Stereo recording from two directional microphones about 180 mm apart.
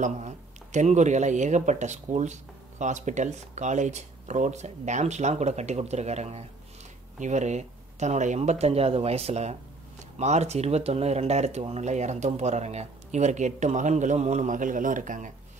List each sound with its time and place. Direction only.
0.0 s speech: 40° right (ahead or behind)